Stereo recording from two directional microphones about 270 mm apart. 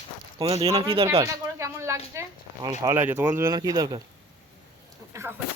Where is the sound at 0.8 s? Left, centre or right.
Centre.